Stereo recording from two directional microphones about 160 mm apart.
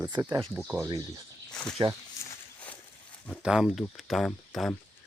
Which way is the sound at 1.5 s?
5° left (ahead or behind).